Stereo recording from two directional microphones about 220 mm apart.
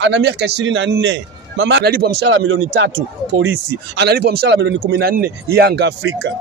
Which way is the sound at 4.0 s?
50° right (ahead or behind).